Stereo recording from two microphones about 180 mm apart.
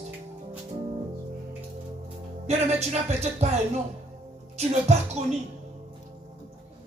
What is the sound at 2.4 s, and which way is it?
Music, 40° right (ahead or behind).